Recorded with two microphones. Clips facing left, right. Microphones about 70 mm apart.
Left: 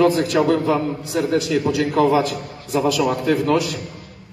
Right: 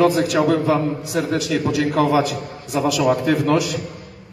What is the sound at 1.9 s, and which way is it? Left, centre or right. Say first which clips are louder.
A man's voice: left 2 dB; centre.